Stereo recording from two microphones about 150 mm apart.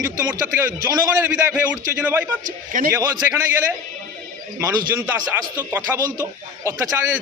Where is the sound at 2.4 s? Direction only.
60° right (ahead or behind).